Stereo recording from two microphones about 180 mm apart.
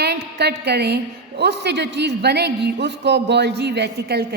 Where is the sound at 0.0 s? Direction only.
65° right (ahead or behind).